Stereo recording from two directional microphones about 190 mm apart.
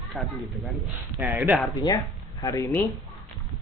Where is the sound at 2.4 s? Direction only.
15° left (ahead or behind).